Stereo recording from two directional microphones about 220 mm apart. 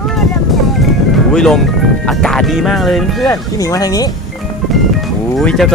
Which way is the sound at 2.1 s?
Centre (ahead or behind).